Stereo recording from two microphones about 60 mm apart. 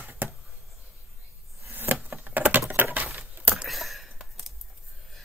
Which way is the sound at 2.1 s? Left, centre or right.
Right.